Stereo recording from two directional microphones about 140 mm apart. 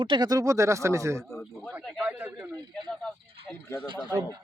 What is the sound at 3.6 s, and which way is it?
Speech, 15° left (ahead or behind).